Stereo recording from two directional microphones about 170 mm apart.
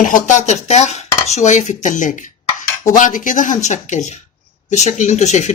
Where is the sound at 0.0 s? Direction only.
45° left (ahead or behind).